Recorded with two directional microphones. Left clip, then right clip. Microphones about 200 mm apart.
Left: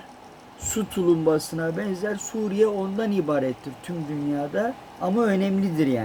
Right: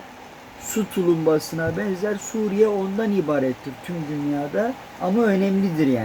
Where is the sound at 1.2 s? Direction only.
15° left (ahead or behind).